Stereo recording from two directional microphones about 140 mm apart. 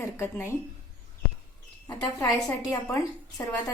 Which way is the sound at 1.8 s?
25° left (ahead or behind).